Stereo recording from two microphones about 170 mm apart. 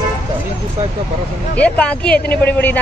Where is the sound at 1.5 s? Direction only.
10° left (ahead or behind).